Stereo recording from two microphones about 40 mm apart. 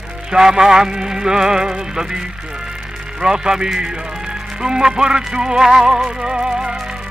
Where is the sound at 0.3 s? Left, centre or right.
Centre.